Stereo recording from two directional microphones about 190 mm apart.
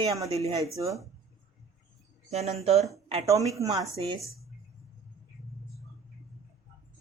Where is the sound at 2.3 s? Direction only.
35° right (ahead or behind).